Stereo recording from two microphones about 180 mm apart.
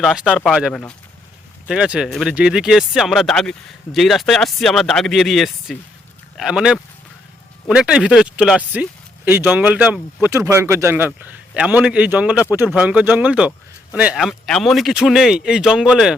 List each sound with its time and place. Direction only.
0.0 s speech: 5° right (ahead or behind)